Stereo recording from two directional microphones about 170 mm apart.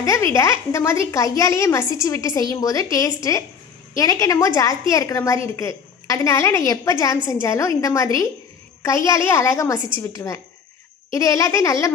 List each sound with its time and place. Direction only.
0.0 s a woman's voice: 15° left (ahead or behind)